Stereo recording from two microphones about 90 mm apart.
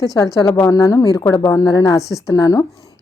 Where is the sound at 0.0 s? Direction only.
40° left (ahead or behind).